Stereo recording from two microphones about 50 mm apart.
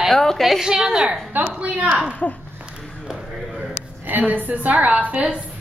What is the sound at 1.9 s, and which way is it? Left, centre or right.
Speech, centre.